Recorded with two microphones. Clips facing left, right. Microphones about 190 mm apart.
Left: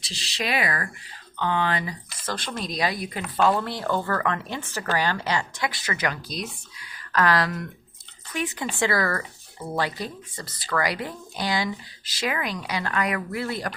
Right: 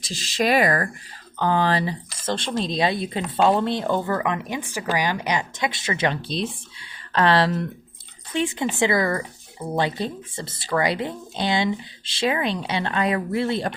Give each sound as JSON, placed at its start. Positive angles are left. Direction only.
{"t": 0.0, "sound": "speech", "side_deg": -45}